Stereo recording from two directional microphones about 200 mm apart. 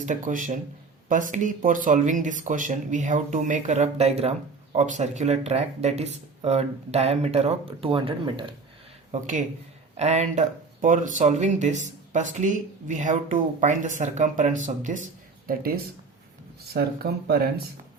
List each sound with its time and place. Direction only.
0.0 s speech: 40° right (ahead or behind)
9.1 s speech: 35° right (ahead or behind)